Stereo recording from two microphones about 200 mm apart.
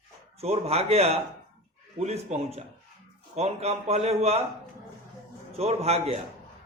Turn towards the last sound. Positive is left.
turn(degrees=-30)  # may be behind; listen again after turning